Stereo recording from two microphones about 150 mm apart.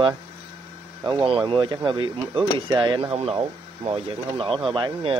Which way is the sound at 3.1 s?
40° right (ahead or behind).